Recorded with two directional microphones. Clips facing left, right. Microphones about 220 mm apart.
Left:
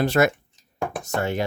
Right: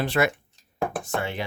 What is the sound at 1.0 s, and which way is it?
Speech, 40° left (ahead or behind).